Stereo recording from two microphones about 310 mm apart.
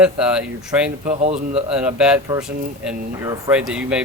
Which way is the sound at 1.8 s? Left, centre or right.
Centre.